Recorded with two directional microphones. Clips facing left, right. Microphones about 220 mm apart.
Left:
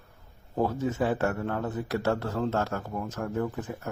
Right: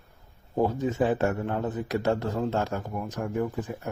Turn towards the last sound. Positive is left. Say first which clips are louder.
# right 2 dB
turn(degrees=-15)  # may be behind; listen again after turning